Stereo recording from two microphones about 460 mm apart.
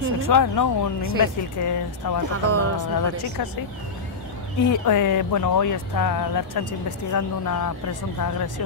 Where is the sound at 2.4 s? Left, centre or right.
Right.